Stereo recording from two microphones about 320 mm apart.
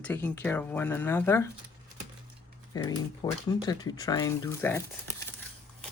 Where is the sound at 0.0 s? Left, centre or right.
Centre.